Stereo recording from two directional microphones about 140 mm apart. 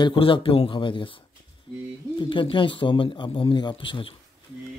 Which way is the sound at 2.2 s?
35° left (ahead or behind).